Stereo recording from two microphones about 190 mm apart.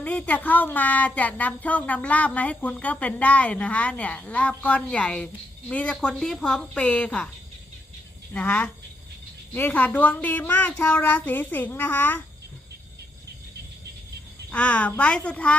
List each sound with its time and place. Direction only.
0.0 s speech: 5° left (ahead or behind)
8.3 s speech: 10° left (ahead or behind)
14.5 s speech: 5° left (ahead or behind)